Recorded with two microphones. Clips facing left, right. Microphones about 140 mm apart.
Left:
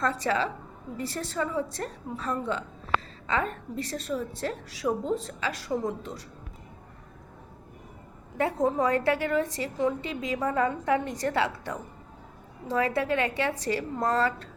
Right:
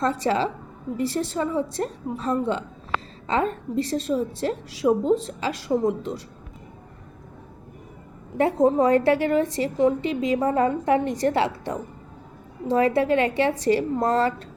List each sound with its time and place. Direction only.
0.0 s a woman's voice: 25° right (ahead or behind)
8.4 s a woman's voice: 25° right (ahead or behind)